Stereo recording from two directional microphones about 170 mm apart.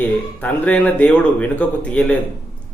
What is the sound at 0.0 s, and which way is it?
Speech, 10° left (ahead or behind).